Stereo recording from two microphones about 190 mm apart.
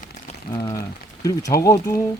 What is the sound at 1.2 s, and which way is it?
Speech, 15° left (ahead or behind).